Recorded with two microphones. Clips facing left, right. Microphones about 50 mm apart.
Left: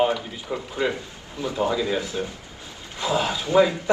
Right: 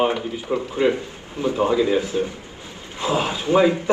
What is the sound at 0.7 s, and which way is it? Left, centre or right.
A man's voice, right.